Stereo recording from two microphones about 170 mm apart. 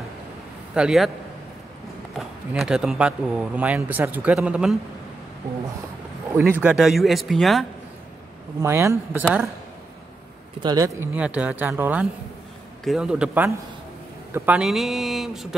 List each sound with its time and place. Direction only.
0.7 s speech: 5° right (ahead or behind)
2.1 s speech: centre (ahead or behind)
6.6 s speech: 5° right (ahead or behind)
8.5 s speech: 15° right (ahead or behind)
10.6 s speech: 20° right (ahead or behind)
11.1 s speech: 5° right (ahead or behind)